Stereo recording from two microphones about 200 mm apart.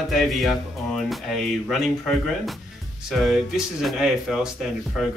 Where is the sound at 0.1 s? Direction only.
Centre (ahead or behind).